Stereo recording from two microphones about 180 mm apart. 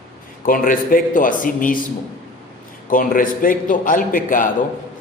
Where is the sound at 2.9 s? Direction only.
50° left (ahead or behind).